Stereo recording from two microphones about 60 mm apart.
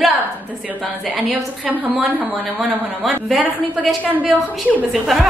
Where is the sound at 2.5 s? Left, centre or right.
Centre.